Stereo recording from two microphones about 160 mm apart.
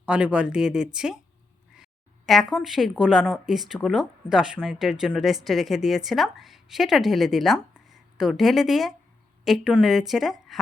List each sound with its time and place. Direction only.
0.0 s speech: 5° right (ahead or behind)